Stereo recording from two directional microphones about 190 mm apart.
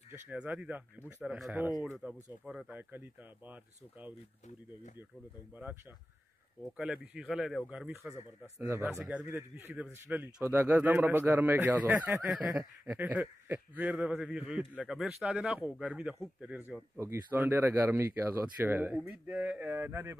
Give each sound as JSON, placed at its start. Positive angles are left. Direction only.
{"t": 0.1, "sound": "speech", "side_deg": -10}
{"t": 6.6, "sound": "speech", "side_deg": -5}